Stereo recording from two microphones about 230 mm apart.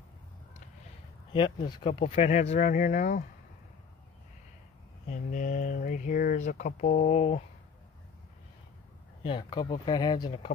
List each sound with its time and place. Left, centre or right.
1.3 s speech: left
5.1 s speech: left
9.2 s speech: centre